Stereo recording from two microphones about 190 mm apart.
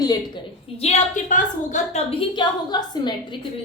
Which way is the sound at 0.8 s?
40° left (ahead or behind).